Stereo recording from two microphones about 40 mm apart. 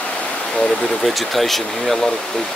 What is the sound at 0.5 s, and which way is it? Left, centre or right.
Speech, left.